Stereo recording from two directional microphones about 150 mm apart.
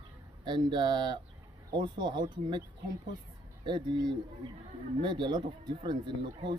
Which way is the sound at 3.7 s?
30° right (ahead or behind).